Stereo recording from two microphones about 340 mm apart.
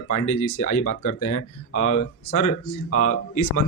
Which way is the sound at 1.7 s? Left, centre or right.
Centre.